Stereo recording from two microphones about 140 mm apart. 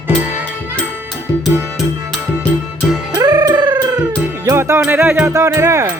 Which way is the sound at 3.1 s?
25° right (ahead or behind).